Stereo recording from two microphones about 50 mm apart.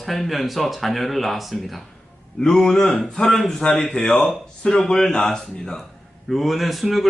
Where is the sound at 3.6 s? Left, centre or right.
Centre.